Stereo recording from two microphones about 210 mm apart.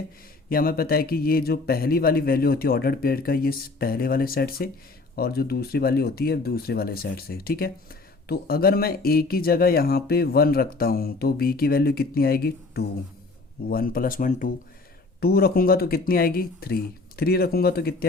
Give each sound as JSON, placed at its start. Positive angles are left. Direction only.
{"t": 0.5, "sound": "speech", "side_deg": 45}